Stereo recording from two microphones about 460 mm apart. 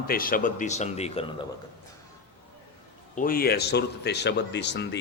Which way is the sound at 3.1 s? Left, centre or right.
Centre.